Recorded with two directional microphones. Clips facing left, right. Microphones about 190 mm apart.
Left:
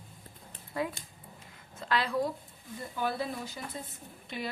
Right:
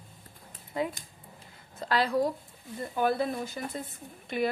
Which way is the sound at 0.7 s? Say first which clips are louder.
Right 2 dB; 20° right (ahead or behind).